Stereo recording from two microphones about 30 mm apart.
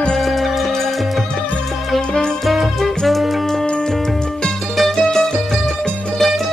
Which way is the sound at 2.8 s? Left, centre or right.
Centre.